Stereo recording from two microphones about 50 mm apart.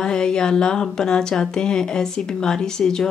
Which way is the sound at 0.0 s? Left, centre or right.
Centre.